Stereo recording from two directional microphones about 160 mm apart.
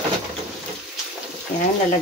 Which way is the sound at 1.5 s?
55° left (ahead or behind).